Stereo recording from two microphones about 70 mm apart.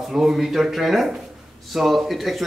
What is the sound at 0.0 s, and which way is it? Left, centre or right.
A man's voice, centre.